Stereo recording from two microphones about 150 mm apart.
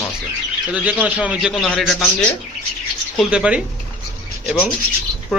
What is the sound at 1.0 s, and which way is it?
Speech, 10° right (ahead or behind).